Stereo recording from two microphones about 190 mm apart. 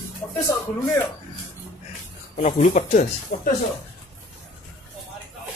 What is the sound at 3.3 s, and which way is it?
Speech, 55° left (ahead or behind).